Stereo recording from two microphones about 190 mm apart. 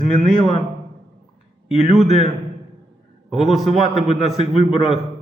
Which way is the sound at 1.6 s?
Centre (ahead or behind).